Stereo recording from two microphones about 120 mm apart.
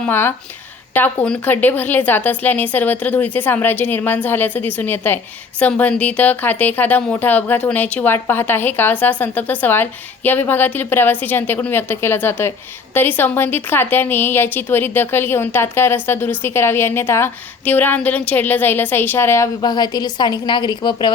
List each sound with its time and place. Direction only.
0.0 s a woman's voice: 15° left (ahead or behind)
19.6 s a woman's voice: 35° left (ahead or behind)